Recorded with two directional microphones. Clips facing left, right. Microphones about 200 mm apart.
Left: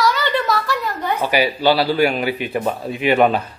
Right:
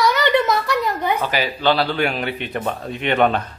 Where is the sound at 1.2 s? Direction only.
10° left (ahead or behind).